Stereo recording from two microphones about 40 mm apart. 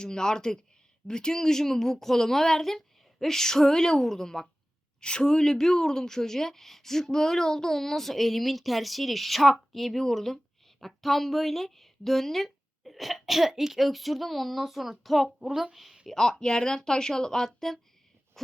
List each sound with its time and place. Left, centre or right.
0.0 s speech: centre
4.9 s speech: left; by 16.0 s centre
16.0 s speech: centre
18.4 s a sound: centre